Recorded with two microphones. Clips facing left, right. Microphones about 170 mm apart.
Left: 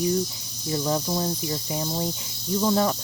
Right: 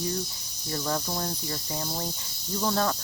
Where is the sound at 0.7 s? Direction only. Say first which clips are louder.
Left 5 dB; 15° left (ahead or behind).